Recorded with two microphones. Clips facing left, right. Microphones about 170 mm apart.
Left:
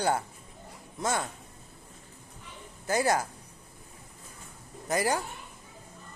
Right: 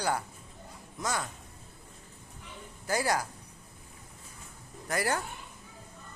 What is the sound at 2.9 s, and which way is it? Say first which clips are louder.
Speech: left 3 dB; 25° left (ahead or behind).